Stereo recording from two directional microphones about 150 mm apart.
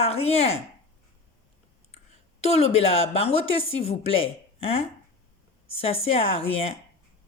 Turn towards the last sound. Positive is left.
turn(degrees=40)  # may be behind; listen again after turning